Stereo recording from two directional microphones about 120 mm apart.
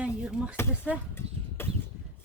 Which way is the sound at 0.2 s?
10° right (ahead or behind).